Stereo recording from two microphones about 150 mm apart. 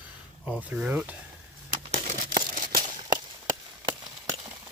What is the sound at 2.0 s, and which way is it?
Crumpling, 60° right (ahead or behind).